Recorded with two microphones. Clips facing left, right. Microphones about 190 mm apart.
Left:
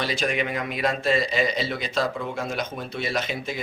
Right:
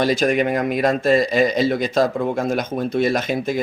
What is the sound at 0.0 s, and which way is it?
Speech, 45° right (ahead or behind).